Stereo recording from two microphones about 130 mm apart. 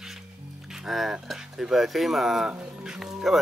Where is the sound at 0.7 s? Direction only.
Centre (ahead or behind).